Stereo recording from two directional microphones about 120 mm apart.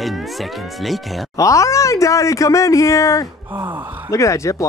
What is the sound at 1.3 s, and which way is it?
Speech, 25° left (ahead or behind).